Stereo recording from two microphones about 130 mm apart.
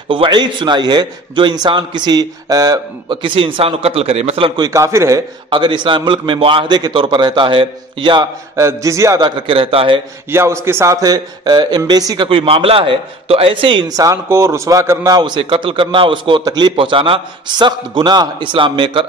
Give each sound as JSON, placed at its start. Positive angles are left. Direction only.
{"t": 0.1, "sound": "a man's voice", "side_deg": -40}
{"t": 4.6, "sound": "a man's voice", "side_deg": -25}
{"t": 5.5, "sound": "a man's voice", "side_deg": -35}
{"t": 8.5, "sound": "a man's voice", "side_deg": -25}
{"t": 9.2, "sound": "a man's voice", "side_deg": -45}
{"t": 10.3, "sound": "a man's voice", "side_deg": -20}
{"t": 12.3, "sound": "a man's voice", "side_deg": -45}
{"t": 13.8, "sound": "a man's voice", "side_deg": -25}